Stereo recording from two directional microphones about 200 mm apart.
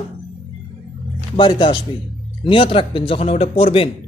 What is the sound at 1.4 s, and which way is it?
Speech, 25° left (ahead or behind).